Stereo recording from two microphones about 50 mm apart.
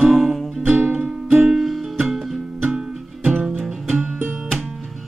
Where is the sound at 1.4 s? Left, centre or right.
Centre.